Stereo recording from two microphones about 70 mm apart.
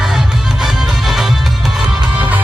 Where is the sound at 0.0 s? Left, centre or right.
Centre.